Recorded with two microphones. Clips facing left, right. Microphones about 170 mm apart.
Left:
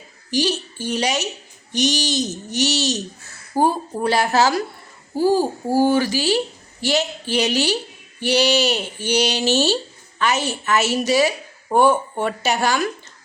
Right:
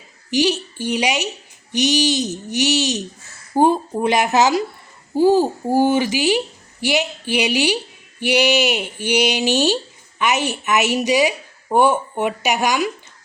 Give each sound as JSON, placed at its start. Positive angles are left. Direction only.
{"t": 0.3, "sound": "a woman's voice", "side_deg": -15}